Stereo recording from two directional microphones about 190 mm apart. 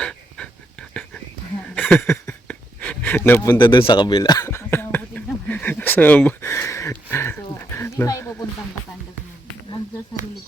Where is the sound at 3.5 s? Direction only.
25° left (ahead or behind).